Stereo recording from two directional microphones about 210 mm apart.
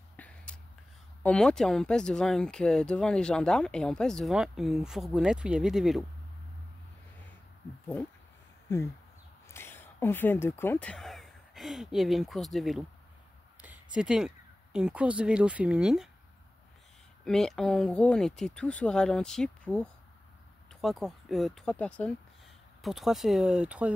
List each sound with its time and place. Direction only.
0.2 s a sound: 5° left (ahead or behind)
1.2 s speech: 5° left (ahead or behind)
9.5 s speech: 10° left (ahead or behind)
13.9 s speech: 5° right (ahead or behind)
17.2 s speech: centre (ahead or behind)